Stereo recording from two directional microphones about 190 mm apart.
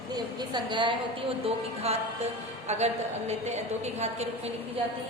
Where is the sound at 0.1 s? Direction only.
20° right (ahead or behind).